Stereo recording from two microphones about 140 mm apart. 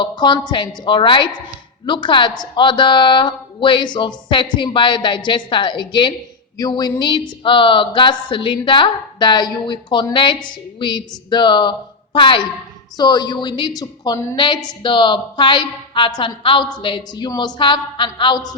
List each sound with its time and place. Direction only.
0.0 s a woman's voice: 35° left (ahead or behind)